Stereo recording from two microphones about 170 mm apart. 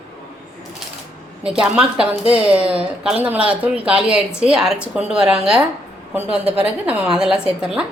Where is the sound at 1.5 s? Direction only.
5° right (ahead or behind).